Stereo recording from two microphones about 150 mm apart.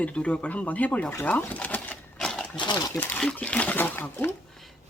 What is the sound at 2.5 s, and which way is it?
Speech, 30° left (ahead or behind).